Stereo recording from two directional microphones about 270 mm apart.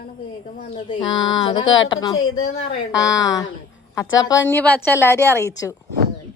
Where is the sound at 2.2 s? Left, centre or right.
Left.